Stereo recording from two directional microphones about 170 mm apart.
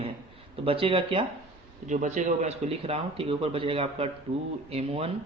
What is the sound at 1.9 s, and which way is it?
Speech, 45° right (ahead or behind).